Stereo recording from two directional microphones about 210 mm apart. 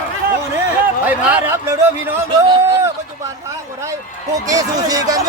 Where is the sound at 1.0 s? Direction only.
10° right (ahead or behind).